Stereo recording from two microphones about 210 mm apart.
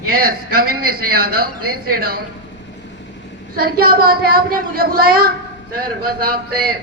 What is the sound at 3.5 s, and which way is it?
Speech, 45° right (ahead or behind).